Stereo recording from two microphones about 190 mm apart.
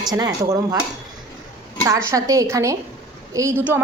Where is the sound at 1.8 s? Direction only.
15° right (ahead or behind).